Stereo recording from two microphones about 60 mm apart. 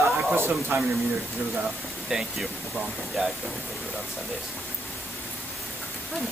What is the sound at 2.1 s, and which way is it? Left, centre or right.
Speech, centre.